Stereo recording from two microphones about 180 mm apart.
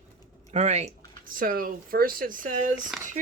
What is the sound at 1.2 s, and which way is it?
Speech, 50° right (ahead or behind).